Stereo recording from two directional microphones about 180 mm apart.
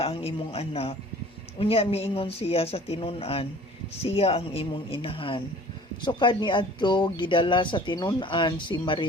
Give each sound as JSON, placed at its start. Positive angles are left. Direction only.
{"t": 0.0, "sound": "speech", "side_deg": 35}